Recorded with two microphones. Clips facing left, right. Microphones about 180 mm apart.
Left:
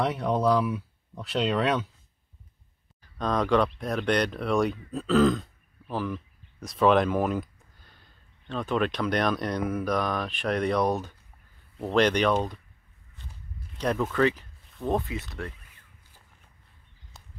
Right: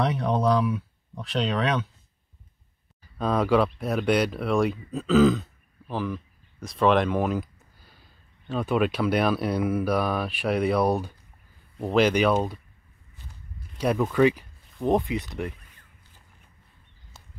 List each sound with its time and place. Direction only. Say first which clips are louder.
0.0 s speech: right 1 dB; 5° left (ahead or behind)
3.0 s speech: right 2 dB; 5° right (ahead or behind)
13.7 s speech: right 3 dB; 10° right (ahead or behind)
17.1 s walk: even; centre (ahead or behind)